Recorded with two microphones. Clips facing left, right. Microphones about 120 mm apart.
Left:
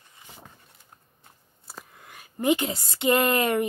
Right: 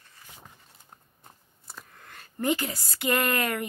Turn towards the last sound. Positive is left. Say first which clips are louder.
# left 5 dB
turn(degrees=25)  # may be behind; listen again after turning